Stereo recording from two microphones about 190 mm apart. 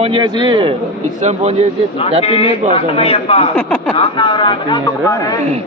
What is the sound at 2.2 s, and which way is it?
A man's voice, 30° left (ahead or behind).